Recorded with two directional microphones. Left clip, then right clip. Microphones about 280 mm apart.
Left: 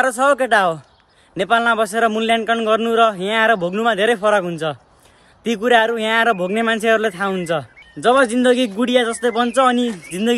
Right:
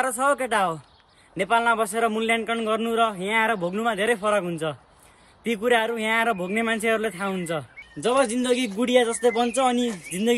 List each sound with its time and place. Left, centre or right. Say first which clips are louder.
0.0 s a man's voice: left 7 dB; centre